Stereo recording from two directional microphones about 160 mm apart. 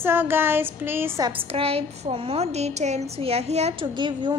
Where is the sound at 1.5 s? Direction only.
40° right (ahead or behind).